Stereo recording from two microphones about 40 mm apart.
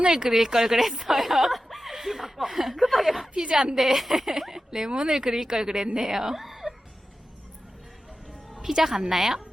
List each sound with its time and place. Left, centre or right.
0.0 s speech: centre
3.3 s speech: centre
8.6 s speech: centre